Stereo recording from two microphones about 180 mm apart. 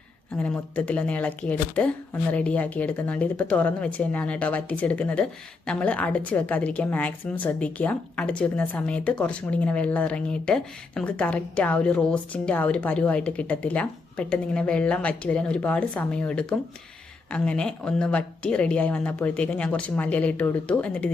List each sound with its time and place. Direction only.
0.3 s speech: 10° left (ahead or behind)